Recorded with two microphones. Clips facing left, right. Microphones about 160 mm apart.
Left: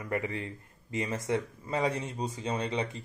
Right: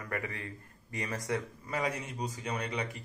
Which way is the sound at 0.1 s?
25° left (ahead or behind).